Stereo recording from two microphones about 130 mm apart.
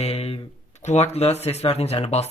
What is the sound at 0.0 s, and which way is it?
Speech, 55° left (ahead or behind).